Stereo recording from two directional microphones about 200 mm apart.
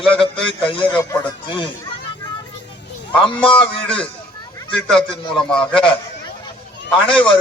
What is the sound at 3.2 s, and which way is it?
Speech, 25° left (ahead or behind).